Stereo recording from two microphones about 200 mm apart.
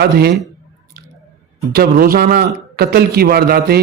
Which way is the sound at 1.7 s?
45° right (ahead or behind).